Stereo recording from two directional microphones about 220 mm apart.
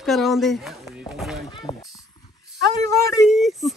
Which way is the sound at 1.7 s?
30° left (ahead or behind).